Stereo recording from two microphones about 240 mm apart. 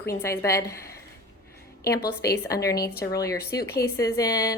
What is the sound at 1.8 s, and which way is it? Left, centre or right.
Speech, left.